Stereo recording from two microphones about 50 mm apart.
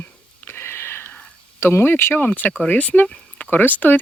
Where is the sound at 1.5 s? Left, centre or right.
Left.